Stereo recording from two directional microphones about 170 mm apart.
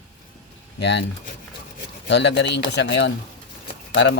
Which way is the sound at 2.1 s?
90° left.